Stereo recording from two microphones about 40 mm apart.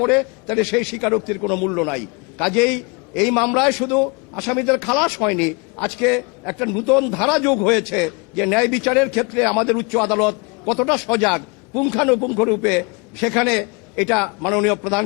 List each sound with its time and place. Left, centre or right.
0.0 s a man's voice: centre